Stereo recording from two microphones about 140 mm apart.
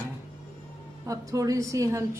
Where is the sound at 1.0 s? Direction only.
25° right (ahead or behind).